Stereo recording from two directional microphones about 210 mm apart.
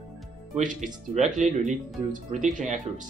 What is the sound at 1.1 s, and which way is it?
Speech, 35° right (ahead or behind).